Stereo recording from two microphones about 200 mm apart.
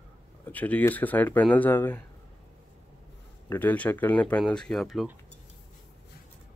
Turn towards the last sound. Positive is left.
turn(degrees=0)  # may be behind; listen again after turning